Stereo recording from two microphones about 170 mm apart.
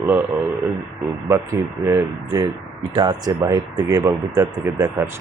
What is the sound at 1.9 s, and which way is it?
Speech, 20° right (ahead or behind).